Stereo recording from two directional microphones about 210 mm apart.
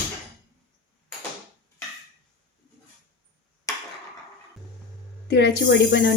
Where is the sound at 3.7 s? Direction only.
15° left (ahead or behind).